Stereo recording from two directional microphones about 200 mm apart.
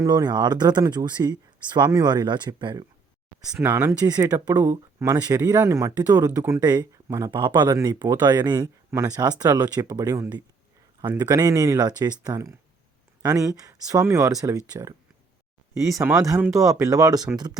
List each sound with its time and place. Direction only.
0.0 s speech: 20° right (ahead or behind)
3.5 s speech: 10° right (ahead or behind)